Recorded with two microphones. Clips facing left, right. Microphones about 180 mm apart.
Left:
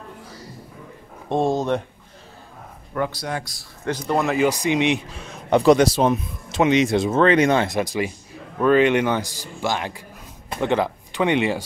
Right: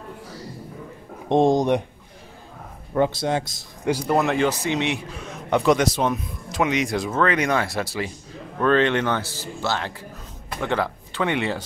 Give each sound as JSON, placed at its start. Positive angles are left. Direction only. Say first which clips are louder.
{"t": 1.3, "sound": "speech", "louder": "right 3 dB", "side_deg": -15}
{"t": 2.9, "sound": "speech", "louder": "right 5 dB", "side_deg": -25}
{"t": 3.9, "sound": "speech", "louder": "right 1 dB", "side_deg": -5}
{"t": 4.5, "sound": "speech", "louder": "left 4 dB", "side_deg": 15}
{"t": 5.5, "sound": "speech", "louder": "left 4 dB", "side_deg": 35}